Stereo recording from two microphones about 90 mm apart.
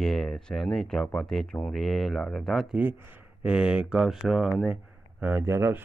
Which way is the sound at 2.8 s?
25° right (ahead or behind).